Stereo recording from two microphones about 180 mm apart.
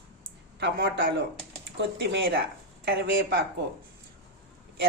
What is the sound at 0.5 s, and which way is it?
Speech, 70° right (ahead or behind).